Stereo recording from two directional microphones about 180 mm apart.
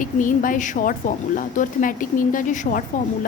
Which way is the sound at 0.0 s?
45° left (ahead or behind).